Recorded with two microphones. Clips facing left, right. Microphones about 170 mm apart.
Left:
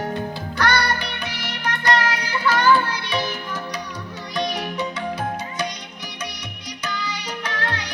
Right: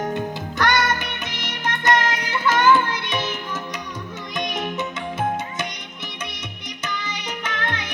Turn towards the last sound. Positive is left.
turn(degrees=-20)  # may be behind; listen again after turning